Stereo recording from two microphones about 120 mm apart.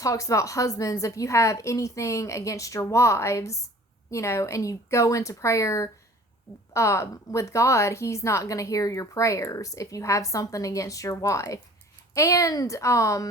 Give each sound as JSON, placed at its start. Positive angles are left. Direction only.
{"t": 0.0, "sound": "a woman's voice", "side_deg": 25}